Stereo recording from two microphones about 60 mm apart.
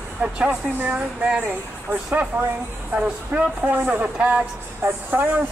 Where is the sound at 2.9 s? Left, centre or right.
Right.